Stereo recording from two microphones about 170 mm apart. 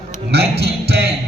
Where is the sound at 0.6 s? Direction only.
75° right (ahead or behind).